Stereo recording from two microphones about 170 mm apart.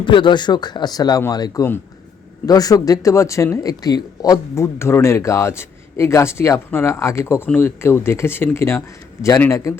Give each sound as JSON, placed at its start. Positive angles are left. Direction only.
{"t": 0.0, "sound": "speech", "side_deg": 30}